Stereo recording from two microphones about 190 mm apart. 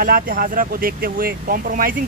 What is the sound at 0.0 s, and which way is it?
Speech, 50° right (ahead or behind).